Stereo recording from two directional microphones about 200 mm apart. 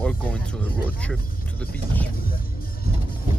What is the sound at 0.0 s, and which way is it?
Speech, 5° left (ahead or behind).